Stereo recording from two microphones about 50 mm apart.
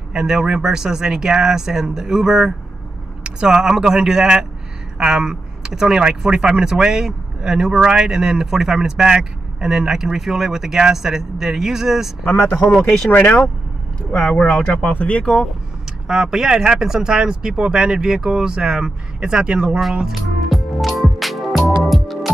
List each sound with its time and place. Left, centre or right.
0.1 s speech: centre
12.3 s speech: left
12.7 s speech: centre
14.1 s speech: centre
16.1 s speech: centre
19.8 s music: centre